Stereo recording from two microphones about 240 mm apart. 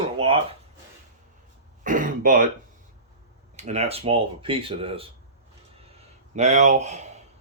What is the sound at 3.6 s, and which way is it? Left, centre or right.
Speech, right.